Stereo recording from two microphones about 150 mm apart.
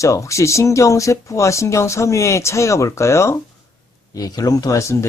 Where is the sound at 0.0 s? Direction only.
20° left (ahead or behind).